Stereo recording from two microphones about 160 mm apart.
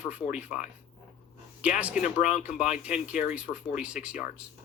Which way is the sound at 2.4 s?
5° right (ahead or behind).